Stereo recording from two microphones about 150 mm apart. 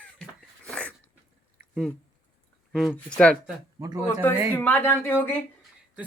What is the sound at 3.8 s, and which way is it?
Speech, 25° right (ahead or behind).